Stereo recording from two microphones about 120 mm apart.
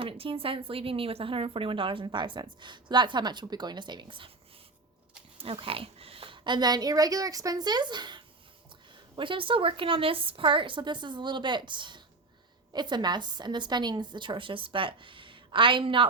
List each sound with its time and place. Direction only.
0.0 s speech: 50° right (ahead or behind)
5.4 s a woman's voice: 50° right (ahead or behind)